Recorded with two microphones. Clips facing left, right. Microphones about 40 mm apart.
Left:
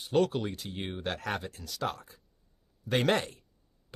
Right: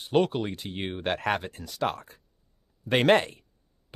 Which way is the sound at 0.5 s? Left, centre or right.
Right.